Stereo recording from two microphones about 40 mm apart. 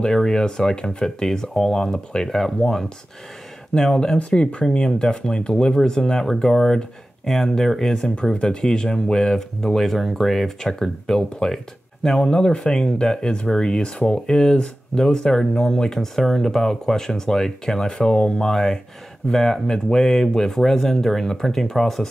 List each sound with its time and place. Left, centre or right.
0.0 s speech: centre
4.2 s speech: left; by 10.5 s centre
10.6 s speech: centre
12.3 s speech: centre